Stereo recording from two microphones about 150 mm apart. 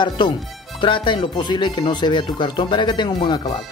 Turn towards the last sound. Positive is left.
turn(degrees=30)  # may be behind; listen again after turning